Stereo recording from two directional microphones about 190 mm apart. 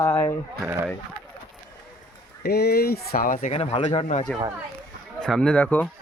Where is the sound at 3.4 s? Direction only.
35° left (ahead or behind).